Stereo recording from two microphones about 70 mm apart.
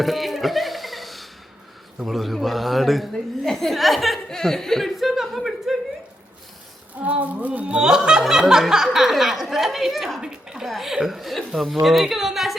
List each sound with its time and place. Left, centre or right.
0.0 s a sound: centre
2.0 s snicker: centre
7.0 s speech: right
7.8 s snicker: centre